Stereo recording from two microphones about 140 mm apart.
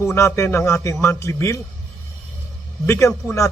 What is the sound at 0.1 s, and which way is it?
A man's voice, 20° left (ahead or behind).